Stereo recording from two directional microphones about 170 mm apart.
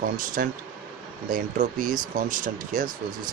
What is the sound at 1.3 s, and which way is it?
Speech, 50° right (ahead or behind).